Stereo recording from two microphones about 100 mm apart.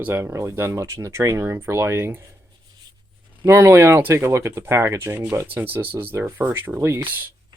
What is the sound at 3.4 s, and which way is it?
Speech, 25° right (ahead or behind).